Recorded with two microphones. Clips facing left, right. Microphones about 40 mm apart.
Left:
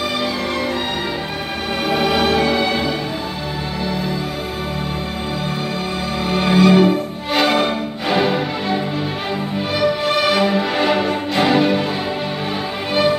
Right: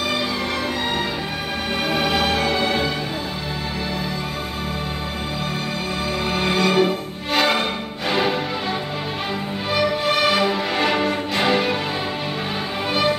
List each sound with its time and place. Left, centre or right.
1.9 s music: centre
6.2 s music: centre
10.0 s music: centre